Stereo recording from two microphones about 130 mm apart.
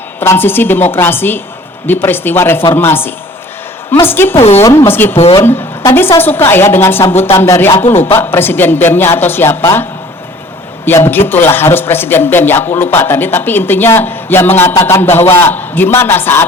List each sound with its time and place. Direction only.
0.2 s a man's voice: 15° left (ahead or behind)
4.4 s a woman's voice: 55° left (ahead or behind)
4.6 s a man's voice: 25° left (ahead or behind)
5.1 s a woman's voice: 50° left (ahead or behind)
5.4 s a man's voice: 20° left (ahead or behind)
10.8 s a man's voice: 15° left (ahead or behind)